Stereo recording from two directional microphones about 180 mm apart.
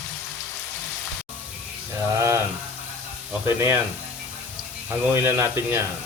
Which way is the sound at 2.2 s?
15° right (ahead or behind).